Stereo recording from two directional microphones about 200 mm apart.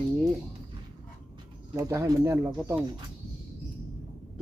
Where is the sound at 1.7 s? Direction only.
15° right (ahead or behind).